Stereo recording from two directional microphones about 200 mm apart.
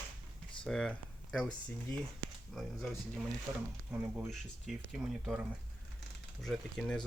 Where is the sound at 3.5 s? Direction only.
15° right (ahead or behind); by 7.1 s 5° left (ahead or behind).